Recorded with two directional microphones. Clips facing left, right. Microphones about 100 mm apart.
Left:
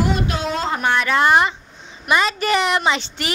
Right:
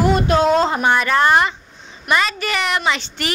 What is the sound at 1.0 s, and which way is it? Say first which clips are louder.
Speech: left 2 dB; 5° left (ahead or behind).